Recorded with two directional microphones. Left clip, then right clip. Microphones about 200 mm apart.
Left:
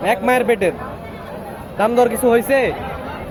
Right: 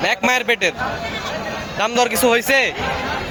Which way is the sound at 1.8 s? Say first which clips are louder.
Left 2 dB; centre (ahead or behind).